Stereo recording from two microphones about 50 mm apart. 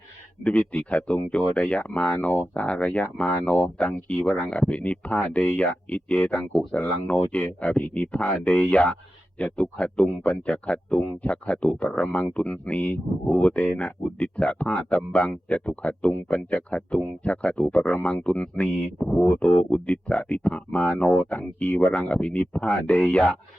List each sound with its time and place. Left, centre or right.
0.4 s speech: left